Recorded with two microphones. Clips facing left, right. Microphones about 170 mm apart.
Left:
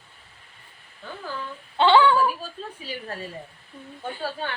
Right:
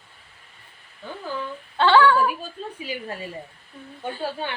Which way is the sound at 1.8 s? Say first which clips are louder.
Even; 15° left (ahead or behind).